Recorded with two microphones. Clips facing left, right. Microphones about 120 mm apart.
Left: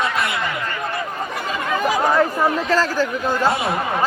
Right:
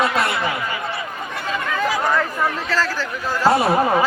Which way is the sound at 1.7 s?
15° left (ahead or behind).